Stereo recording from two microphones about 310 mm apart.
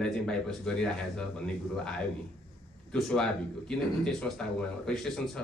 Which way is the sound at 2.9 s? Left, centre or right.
Centre.